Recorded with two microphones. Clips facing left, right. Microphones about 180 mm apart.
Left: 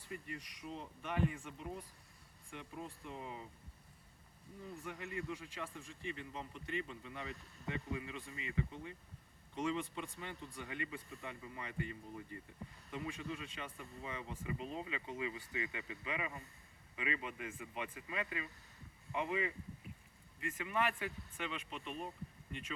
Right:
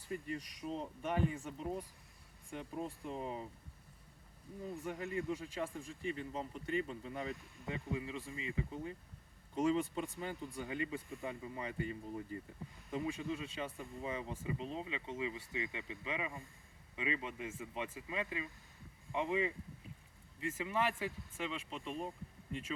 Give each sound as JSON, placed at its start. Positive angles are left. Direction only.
{"t": 0.1, "sound": "speech", "side_deg": -35}
{"t": 4.9, "sound": "speech", "side_deg": -35}